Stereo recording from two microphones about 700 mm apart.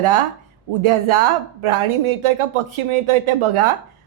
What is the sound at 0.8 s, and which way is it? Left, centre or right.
Speech, right.